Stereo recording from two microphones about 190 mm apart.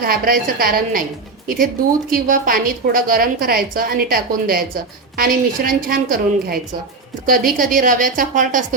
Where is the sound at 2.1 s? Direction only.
45° right (ahead or behind).